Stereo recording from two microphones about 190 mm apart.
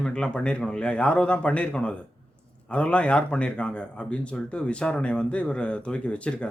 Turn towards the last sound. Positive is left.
turn(degrees=5)  # may be behind; listen again after turning